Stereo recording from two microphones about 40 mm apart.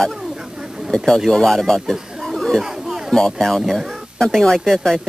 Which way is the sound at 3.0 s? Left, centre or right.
Centre.